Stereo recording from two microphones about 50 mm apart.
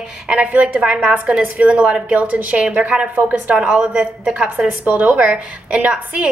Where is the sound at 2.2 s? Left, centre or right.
Right.